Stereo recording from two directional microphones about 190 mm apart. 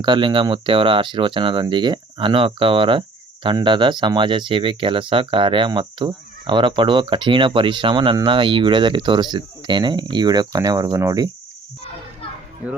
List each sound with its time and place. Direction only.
0.0 s speech: 25° right (ahead or behind)